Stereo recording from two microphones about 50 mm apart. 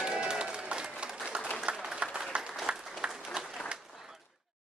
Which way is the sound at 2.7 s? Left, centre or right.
Right.